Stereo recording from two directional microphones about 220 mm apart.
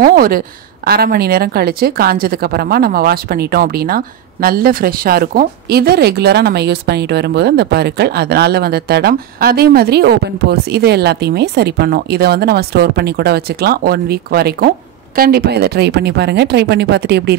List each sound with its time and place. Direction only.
0.0 s a woman's voice: 40° right (ahead or behind)